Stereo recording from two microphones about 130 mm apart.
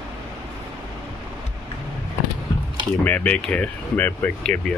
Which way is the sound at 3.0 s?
10° left (ahead or behind).